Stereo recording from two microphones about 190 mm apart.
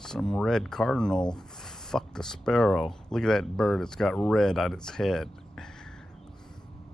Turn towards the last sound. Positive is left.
turn(degrees=0)  # may be behind; listen again after turning